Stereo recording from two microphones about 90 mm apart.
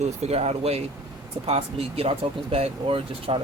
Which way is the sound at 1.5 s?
90° right.